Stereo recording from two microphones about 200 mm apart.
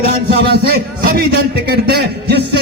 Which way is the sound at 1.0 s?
50° right (ahead or behind).